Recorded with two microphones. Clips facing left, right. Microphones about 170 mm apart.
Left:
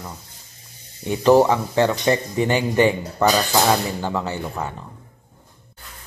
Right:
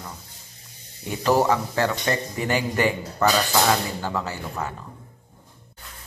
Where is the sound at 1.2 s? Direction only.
25° left (ahead or behind).